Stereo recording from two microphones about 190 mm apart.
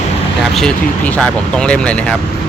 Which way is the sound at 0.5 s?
5° left (ahead or behind).